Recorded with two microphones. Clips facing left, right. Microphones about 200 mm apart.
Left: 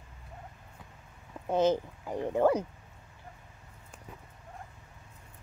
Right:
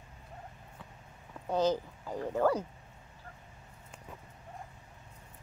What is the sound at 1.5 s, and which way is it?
Speech, 20° left (ahead or behind).